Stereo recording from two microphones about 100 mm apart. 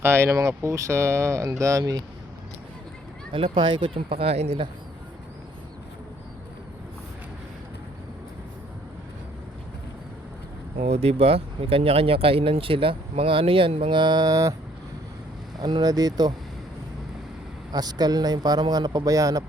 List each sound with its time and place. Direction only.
0.0 s speech: 25° right (ahead or behind)
3.3 s speech: 60° right (ahead or behind); by 4.6 s 90° right
10.8 s speech: 90° right; by 14.0 s 65° right (ahead or behind)
14.0 s speech: 45° right (ahead or behind)
15.5 s speech: 45° right (ahead or behind)
17.7 s speech: 40° right (ahead or behind)